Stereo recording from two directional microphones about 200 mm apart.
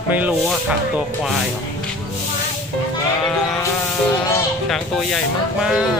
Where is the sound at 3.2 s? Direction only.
Centre (ahead or behind).